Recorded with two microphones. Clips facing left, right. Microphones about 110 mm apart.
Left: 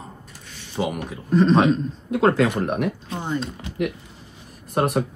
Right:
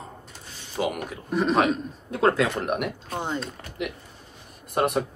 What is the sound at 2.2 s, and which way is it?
Speech, 30° left (ahead or behind).